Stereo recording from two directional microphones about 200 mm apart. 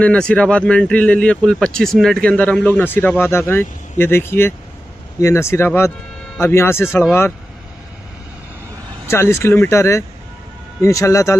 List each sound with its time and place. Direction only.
0.0 s speech: 5° left (ahead or behind)
9.0 s speech: 15° left (ahead or behind)